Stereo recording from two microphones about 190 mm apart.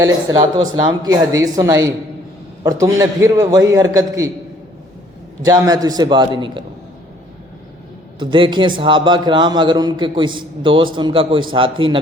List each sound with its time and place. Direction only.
0.0 s a man's voice: 20° right (ahead or behind)
5.5 s a man's voice: 20° right (ahead or behind)
8.2 s a man's voice: 25° right (ahead or behind)